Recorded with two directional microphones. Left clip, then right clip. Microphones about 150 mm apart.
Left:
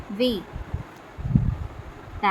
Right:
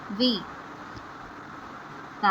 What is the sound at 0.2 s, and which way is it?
Speech, 35° left (ahead or behind).